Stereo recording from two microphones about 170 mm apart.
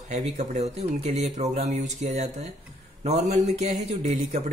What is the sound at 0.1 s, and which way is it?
A man's voice, 45° right (ahead or behind).